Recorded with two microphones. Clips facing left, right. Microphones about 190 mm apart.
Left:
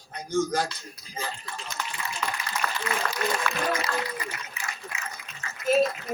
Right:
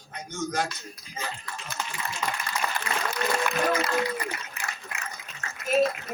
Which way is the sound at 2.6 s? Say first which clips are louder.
Right 1 dB; 15° right (ahead or behind).